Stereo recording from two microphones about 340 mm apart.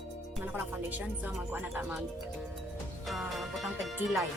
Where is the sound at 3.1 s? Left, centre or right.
Centre.